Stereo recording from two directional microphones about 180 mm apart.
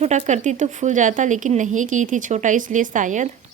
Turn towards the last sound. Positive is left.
turn(degrees=-45)  # may be behind; listen again after turning